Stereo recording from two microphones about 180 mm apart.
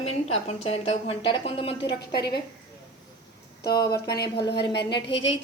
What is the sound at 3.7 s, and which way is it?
Speech, 20° left (ahead or behind).